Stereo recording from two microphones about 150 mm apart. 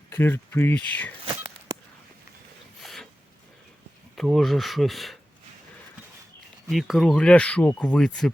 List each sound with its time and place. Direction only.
0.1 s speech: 15° left (ahead or behind)
2.8 s a sound: centre (ahead or behind)
4.1 s speech: centre (ahead or behind)
6.7 s speech: centre (ahead or behind)